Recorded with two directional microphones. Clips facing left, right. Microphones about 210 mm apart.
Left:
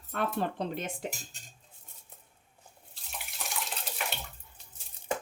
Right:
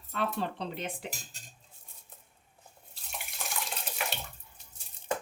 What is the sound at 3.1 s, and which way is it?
Water tap, centre (ahead or behind).